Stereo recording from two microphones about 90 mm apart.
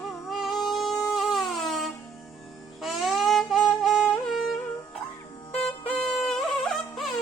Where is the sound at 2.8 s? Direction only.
Centre (ahead or behind).